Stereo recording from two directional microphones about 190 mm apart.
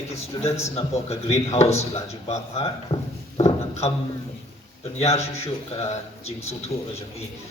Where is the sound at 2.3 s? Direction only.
30° left (ahead or behind).